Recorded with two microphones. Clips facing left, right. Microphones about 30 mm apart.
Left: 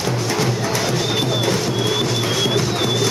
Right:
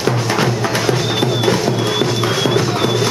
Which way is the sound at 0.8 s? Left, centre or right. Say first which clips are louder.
Right 3 dB; centre.